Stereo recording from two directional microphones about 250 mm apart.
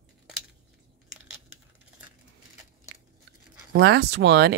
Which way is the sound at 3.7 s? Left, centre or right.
Right.